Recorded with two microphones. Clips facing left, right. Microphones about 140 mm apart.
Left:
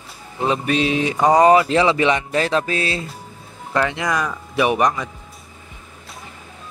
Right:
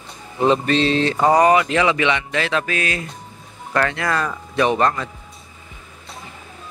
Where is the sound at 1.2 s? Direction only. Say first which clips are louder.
Left 2 dB; 20° left (ahead or behind).